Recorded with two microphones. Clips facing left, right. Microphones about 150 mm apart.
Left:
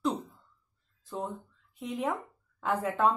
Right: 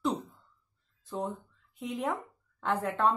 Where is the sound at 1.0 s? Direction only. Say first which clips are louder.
Right 2 dB; centre (ahead or behind).